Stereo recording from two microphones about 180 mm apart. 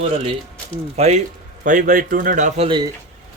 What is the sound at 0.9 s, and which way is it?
Speech, 35° right (ahead or behind).